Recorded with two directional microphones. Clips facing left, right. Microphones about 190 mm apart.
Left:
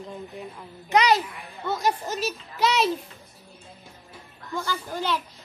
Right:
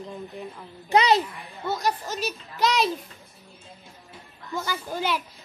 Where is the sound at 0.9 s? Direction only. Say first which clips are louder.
Right 1 dB; 25° right (ahead or behind).